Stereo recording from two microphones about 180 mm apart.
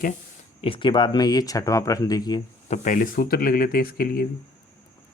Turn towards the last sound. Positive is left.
turn(degrees=55)  # may be behind; listen again after turning